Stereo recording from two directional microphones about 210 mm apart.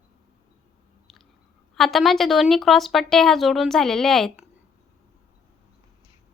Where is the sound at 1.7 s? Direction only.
Centre (ahead or behind).